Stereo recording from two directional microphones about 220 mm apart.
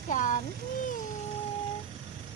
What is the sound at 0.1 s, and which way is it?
Speech, 35° left (ahead or behind).